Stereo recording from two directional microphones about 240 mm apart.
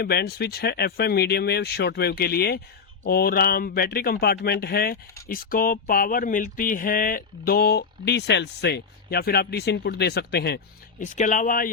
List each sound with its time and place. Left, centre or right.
0.0 s speech: left
11.0 s speech: left